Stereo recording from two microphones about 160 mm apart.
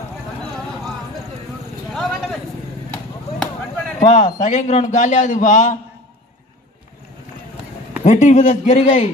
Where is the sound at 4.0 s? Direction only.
50° left (ahead or behind).